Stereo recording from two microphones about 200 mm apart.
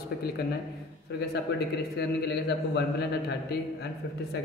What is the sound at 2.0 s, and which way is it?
Speech, 55° left (ahead or behind).